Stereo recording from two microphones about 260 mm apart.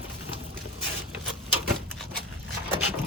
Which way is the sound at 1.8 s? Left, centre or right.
Centre.